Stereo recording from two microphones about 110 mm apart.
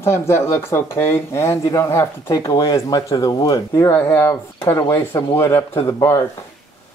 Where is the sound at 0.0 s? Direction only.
25° left (ahead or behind).